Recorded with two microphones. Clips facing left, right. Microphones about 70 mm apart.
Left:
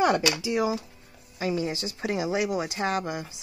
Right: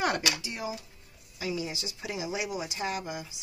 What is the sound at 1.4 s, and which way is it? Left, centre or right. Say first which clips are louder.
Speech: left 6 dB; left.